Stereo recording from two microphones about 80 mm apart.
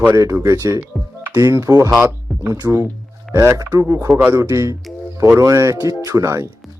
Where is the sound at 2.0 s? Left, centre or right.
Right.